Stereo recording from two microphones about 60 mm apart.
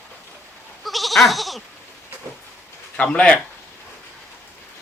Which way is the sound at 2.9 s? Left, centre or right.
Centre.